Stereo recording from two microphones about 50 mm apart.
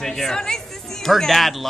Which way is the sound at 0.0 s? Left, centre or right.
Centre.